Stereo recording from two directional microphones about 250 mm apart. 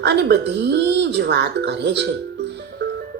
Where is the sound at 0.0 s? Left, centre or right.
Right.